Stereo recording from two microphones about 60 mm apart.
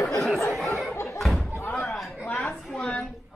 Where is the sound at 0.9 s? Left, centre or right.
Left.